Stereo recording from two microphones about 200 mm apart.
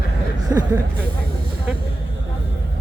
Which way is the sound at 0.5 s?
15° right (ahead or behind).